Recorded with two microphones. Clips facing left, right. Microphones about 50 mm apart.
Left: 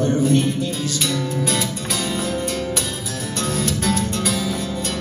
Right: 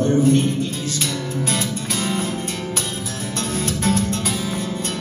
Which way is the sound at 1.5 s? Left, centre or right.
Right.